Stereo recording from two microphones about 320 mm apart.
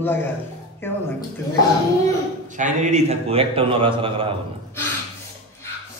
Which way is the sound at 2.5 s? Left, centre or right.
Right.